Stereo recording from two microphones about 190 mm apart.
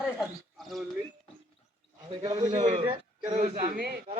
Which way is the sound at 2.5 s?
40° right (ahead or behind).